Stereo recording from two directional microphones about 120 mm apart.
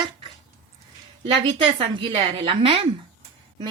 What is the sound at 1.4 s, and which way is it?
A woman's voice, 40° right (ahead or behind).